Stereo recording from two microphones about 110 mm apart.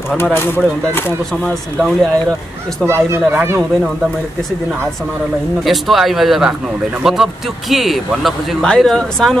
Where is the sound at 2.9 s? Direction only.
25° right (ahead or behind).